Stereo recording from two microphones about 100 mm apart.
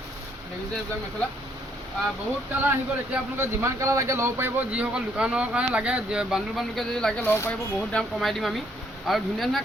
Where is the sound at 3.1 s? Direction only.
25° right (ahead or behind); by 7.2 s 5° left (ahead or behind).